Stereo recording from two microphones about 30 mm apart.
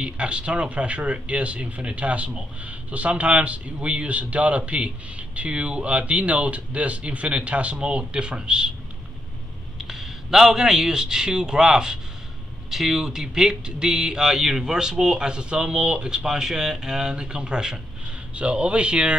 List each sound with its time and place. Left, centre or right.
0.0 s speech: right
8.0 s speech: right
9.8 s a man's voice: centre; by 16.3 s right
16.3 s a man's voice: centre; by 19.1 s right